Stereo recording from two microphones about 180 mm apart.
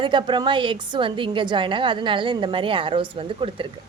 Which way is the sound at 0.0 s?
25° right (ahead or behind).